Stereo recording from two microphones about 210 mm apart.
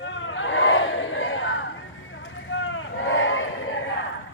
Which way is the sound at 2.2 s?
65° left (ahead or behind).